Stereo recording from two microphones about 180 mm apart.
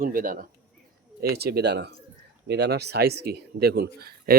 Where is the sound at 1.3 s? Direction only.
65° right (ahead or behind).